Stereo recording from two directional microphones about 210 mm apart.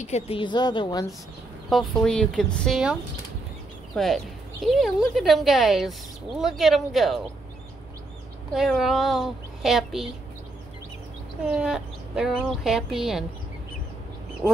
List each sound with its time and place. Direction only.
0.0 s a woman's voice: 30° left (ahead or behind)
1.7 s speech: centre (ahead or behind)
8.5 s speech: centre (ahead or behind)
11.5 s speech: 5° right (ahead or behind)